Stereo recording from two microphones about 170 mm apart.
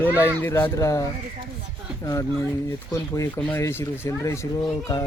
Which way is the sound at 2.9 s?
20° left (ahead or behind).